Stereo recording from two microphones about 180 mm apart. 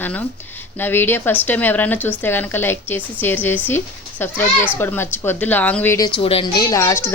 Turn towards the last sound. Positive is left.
turn(degrees=15)  # may be behind; listen again after turning